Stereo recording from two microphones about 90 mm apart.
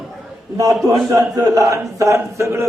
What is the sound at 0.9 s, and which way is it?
A man's voice, 40° right (ahead or behind).